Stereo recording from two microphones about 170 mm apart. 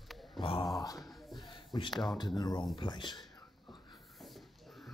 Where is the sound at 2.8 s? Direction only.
25° left (ahead or behind).